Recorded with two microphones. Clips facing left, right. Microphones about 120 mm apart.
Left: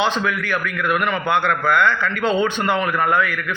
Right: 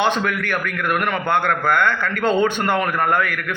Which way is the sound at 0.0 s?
55° right (ahead or behind).